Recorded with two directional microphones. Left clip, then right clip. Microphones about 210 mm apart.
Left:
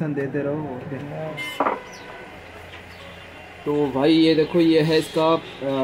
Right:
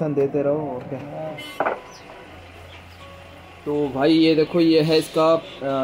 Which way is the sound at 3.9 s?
10° right (ahead or behind).